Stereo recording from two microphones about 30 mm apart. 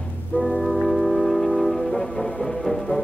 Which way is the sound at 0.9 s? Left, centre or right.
Centre.